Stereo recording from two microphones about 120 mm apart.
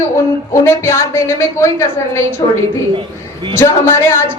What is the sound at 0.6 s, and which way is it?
A woman's voice, 20° left (ahead or behind).